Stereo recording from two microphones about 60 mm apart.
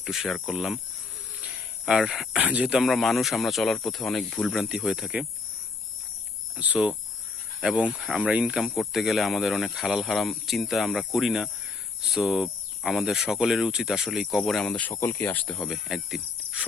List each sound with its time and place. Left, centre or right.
0.0 s speech: centre
1.4 s cricket: centre
2.0 s speech: centre
2.4 s speech: right
2.7 s speech: centre
4.5 s speech: centre
6.6 s speech: right
8.5 s speech: centre
14.4 s speech: centre
15.0 s speech: left
15.3 s speech: left
15.7 s speech: centre